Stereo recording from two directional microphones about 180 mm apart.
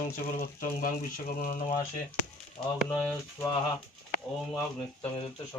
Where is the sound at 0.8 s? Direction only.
50° left (ahead or behind).